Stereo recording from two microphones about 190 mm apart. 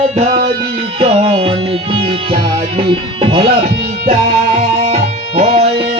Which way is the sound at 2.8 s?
25° right (ahead or behind).